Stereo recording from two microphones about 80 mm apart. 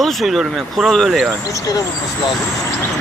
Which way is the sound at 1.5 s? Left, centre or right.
Left.